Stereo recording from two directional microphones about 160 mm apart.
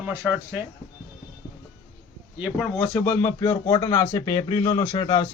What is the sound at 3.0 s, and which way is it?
A man's voice, 15° left (ahead or behind).